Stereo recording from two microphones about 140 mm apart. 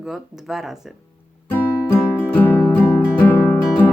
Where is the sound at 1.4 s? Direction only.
15° left (ahead or behind).